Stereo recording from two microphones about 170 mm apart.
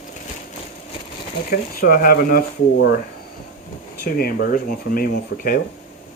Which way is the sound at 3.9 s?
60° left (ahead or behind).